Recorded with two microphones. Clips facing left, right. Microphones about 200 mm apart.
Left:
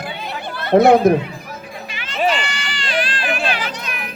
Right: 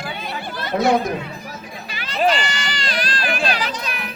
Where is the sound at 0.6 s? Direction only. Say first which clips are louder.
Left 8 dB; 60° left (ahead or behind).